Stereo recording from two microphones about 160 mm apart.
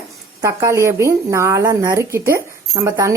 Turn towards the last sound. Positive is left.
turn(degrees=-20)  # may be behind; listen again after turning